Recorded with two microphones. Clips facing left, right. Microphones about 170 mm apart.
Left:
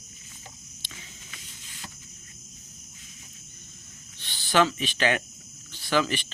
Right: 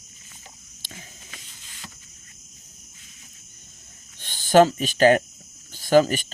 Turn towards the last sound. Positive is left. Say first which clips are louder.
# right 8 dB
turn(degrees=-45)  # may be behind; listen again after turning